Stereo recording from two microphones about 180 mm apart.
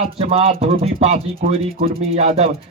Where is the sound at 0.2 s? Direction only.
30° right (ahead or behind).